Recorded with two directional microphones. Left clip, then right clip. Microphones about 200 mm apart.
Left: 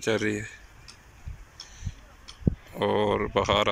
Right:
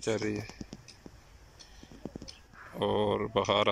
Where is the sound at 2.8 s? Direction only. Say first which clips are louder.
Left 4 dB; 5° right (ahead or behind).